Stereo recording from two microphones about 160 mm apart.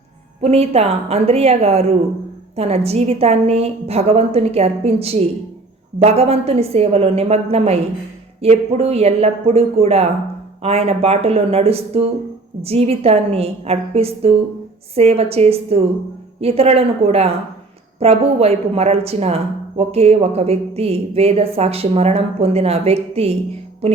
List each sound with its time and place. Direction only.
0.4 s speech: 40° right (ahead or behind)